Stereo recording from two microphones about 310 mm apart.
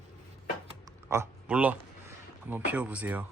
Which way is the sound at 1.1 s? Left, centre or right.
Centre.